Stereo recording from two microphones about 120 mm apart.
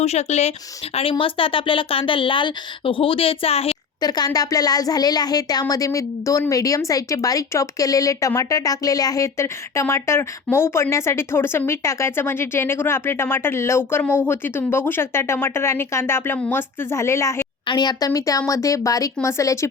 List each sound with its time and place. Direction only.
0.0 s speech: 65° left (ahead or behind)
1.2 s speech: 45° left (ahead or behind)
4.0 s speech: 35° left (ahead or behind)
17.7 s speech: 35° left (ahead or behind)